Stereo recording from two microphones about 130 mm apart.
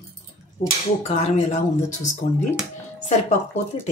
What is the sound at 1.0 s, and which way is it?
Speech, 55° left (ahead or behind).